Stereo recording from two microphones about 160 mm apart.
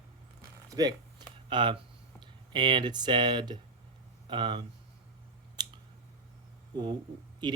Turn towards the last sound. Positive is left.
turn(degrees=-30)  # may be behind; listen again after turning